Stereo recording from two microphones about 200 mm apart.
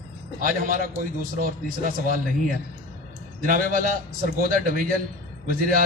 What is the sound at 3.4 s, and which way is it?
A man's voice, 45° right (ahead or behind).